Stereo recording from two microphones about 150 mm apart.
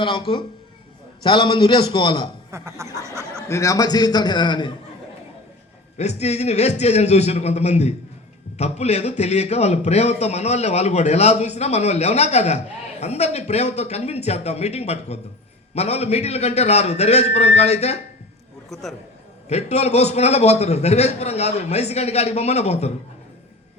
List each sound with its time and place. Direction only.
0.0 s a man's voice: 35° left (ahead or behind)
2.5 s snicker: 20° right (ahead or behind)
3.5 s a man's voice: 20° left (ahead or behind)
6.0 s a man's voice: 45° left (ahead or behind)
18.7 s a man's voice: centre (ahead or behind)
19.5 s a man's voice: 45° left (ahead or behind)